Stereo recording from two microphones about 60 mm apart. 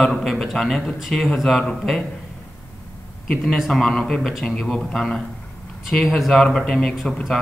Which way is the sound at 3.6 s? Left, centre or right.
Centre.